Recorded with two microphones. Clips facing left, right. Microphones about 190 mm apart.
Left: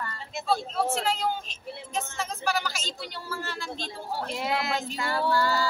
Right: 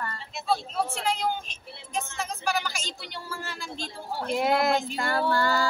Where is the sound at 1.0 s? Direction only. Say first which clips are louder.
Even; centre (ahead or behind).